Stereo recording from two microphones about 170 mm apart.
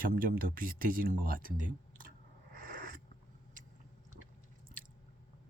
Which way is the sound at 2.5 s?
55° right (ahead or behind).